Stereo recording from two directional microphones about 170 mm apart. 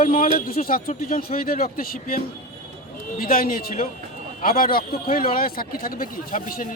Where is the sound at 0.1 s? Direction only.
55° left (ahead or behind).